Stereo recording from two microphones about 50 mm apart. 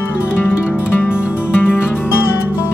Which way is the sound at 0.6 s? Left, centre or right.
Left.